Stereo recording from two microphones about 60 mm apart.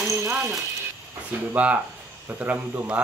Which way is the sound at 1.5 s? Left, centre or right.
Right.